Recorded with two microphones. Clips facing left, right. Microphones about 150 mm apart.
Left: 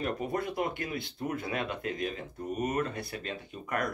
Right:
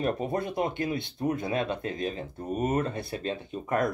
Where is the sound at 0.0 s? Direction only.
25° right (ahead or behind).